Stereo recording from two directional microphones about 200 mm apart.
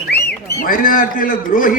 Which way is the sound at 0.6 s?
45° left (ahead or behind).